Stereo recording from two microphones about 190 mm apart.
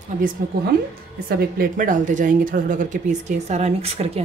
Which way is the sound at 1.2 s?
50° right (ahead or behind).